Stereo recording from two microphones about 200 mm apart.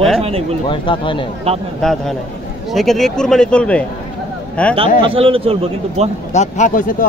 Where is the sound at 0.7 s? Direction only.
25° left (ahead or behind).